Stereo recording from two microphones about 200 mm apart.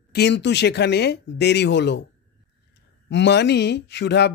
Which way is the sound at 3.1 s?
60° left (ahead or behind).